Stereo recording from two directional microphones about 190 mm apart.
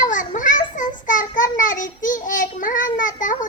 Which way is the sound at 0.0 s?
40° left (ahead or behind).